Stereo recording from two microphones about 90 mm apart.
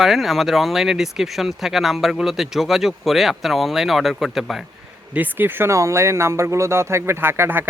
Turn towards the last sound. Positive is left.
turn(degrees=-25)  # may be behind; listen again after turning